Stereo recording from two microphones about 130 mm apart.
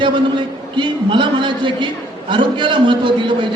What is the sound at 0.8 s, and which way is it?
A man's voice, 40° right (ahead or behind).